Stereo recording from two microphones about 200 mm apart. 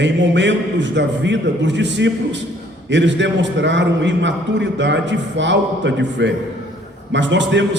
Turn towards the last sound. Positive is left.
turn(degrees=-65)  # may be behind; listen again after turning